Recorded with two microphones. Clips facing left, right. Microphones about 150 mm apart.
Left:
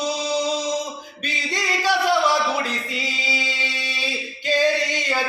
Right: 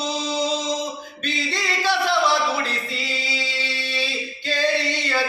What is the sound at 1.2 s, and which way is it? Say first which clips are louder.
Music: right 1 dB; 10° left (ahead or behind).